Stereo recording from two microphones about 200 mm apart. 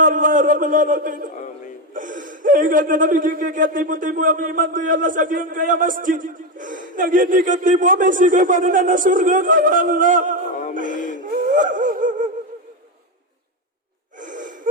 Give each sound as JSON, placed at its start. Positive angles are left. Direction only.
{"t": 0.0, "sound": "a man's voice", "side_deg": -40}
{"t": 10.5, "sound": "music", "side_deg": 40}
{"t": 10.8, "sound": "speech", "side_deg": -40}
{"t": 11.2, "sound": "a sound", "side_deg": -40}
{"t": 14.2, "sound": "gasp", "side_deg": -40}